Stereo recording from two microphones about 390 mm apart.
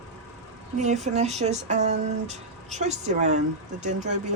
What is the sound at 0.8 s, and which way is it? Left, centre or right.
Speech, centre.